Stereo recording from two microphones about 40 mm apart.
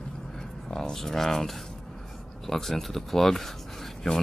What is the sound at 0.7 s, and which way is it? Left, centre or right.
Speech, centre.